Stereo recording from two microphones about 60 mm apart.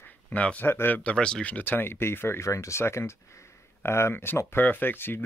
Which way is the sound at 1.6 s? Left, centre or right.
Left.